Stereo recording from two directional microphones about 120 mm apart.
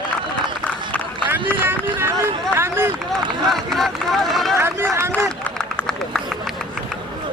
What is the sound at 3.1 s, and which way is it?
Run, centre (ahead or behind).